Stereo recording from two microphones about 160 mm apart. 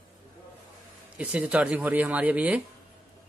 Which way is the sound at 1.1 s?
10° right (ahead or behind).